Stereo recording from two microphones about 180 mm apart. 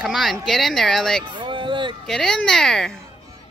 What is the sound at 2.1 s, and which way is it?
Speech, centre (ahead or behind).